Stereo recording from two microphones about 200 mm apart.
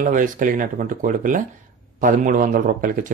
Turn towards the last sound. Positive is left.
turn(degrees=-40)  # may be behind; listen again after turning